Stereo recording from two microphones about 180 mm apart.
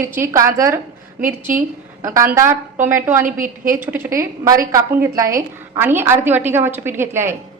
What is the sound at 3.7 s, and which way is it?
A woman's voice, 10° right (ahead or behind).